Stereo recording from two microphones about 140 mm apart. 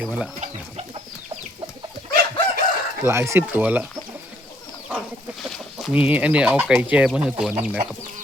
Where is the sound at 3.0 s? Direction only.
20° right (ahead or behind).